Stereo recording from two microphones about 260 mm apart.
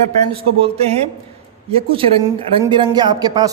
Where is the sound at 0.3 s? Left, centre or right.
Right.